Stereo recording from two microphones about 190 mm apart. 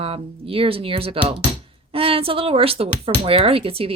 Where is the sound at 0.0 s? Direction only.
30° right (ahead or behind).